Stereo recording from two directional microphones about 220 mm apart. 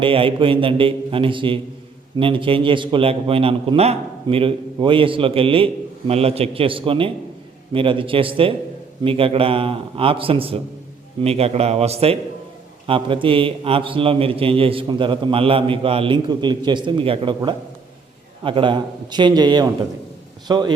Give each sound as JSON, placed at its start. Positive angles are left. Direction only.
{"t": 0.0, "sound": "a man's voice", "side_deg": -25}